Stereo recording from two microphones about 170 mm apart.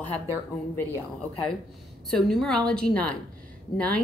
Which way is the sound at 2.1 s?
Centre (ahead or behind).